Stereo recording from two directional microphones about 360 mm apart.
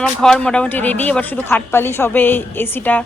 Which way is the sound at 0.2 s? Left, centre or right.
Centre.